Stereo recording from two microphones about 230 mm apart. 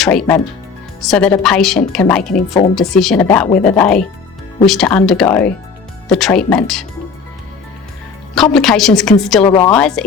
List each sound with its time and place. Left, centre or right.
0.0 s a woman's voice: centre
8.5 s a woman's voice: centre
9.4 s a woman's voice: centre
9.7 s a woman's voice: centre